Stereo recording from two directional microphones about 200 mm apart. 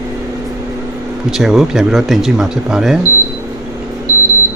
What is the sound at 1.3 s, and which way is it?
Speech, centre (ahead or behind).